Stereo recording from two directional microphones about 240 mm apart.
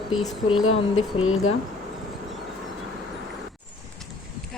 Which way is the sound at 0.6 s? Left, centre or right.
Left.